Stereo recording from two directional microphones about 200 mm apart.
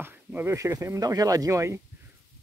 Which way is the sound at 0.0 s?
10° right (ahead or behind).